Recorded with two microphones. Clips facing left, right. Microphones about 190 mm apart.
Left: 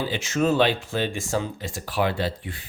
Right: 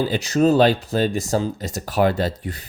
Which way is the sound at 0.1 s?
40° right (ahead or behind).